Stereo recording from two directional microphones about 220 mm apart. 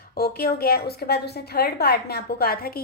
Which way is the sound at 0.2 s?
45° left (ahead or behind).